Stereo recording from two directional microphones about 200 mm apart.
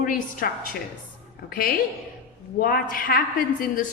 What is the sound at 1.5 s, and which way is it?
A woman's voice, 45° left (ahead or behind).